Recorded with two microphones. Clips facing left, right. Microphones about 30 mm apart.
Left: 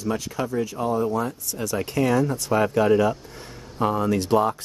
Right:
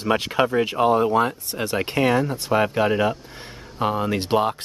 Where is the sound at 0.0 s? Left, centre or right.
Right.